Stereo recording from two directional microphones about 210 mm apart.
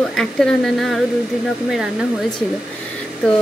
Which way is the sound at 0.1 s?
Centre (ahead or behind).